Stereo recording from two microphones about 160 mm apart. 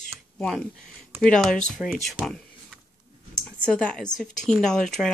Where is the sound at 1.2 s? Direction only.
5° left (ahead or behind).